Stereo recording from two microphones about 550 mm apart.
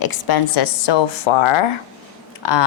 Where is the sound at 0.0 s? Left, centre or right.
Left.